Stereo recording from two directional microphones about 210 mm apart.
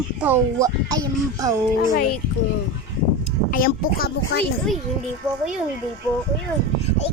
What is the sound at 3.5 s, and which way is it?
Speech, 45° left (ahead or behind).